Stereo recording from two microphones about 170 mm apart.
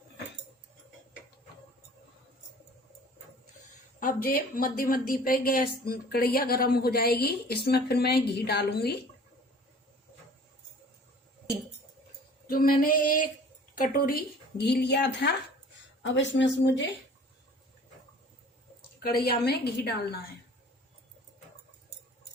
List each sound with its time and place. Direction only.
4.0 s a woman's voice: 60° left (ahead or behind)
12.5 s female singing: 60° left (ahead or behind)
13.7 s speech: 60° left (ahead or behind); by 16.8 s 90° left
19.0 s speech: 65° left (ahead or behind)